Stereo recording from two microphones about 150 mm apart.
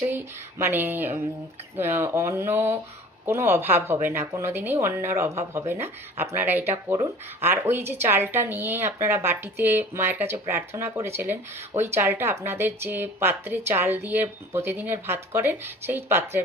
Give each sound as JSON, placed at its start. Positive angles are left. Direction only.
{"t": 0.0, "sound": "speech", "side_deg": -15}